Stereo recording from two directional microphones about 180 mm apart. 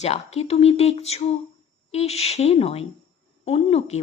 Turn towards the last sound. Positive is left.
turn(degrees=35)  # may be behind; listen again after turning